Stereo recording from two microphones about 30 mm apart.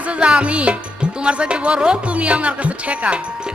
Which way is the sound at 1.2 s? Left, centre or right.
Right.